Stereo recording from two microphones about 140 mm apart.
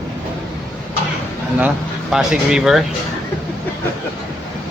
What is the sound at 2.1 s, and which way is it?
Speech, 5° right (ahead or behind).